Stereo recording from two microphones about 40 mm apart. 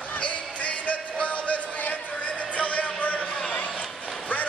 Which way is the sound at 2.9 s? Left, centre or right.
Left.